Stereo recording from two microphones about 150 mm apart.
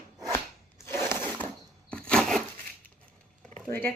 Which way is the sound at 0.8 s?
15° left (ahead or behind).